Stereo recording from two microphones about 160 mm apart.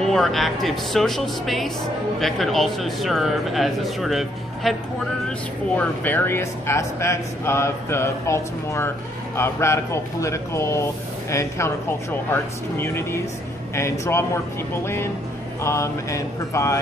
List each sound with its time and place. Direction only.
0.0 s speech: 5° left (ahead or behind)
5.8 s speech: 10° left (ahead or behind)
15.6 s a sound: 20° left (ahead or behind)